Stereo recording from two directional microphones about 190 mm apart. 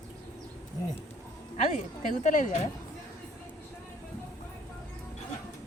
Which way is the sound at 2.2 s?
40° left (ahead or behind).